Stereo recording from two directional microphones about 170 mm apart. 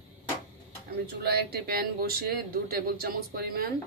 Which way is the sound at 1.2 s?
70° right (ahead or behind).